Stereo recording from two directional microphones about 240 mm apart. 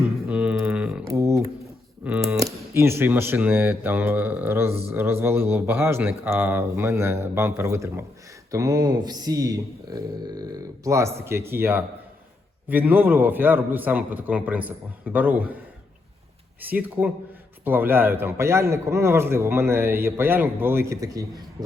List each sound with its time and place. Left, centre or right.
0.3 s a sound: centre
2.0 s a man's voice: centre
16.6 s a man's voice: centre